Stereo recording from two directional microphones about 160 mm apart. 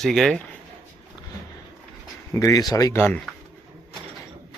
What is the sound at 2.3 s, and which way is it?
Speech, 20° left (ahead or behind).